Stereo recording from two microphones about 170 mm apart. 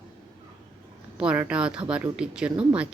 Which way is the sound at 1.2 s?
10° right (ahead or behind).